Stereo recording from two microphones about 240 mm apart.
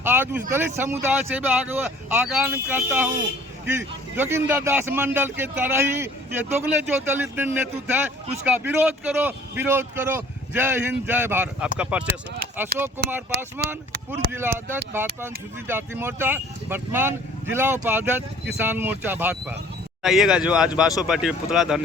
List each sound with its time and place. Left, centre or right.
0.0 s a man's voice: centre
14.2 s speech: right
14.9 s a man's voice: centre